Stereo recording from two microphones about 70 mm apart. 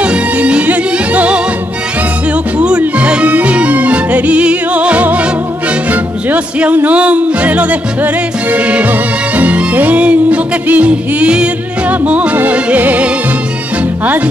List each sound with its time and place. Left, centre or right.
0.0 s music: centre
2.8 s music: centre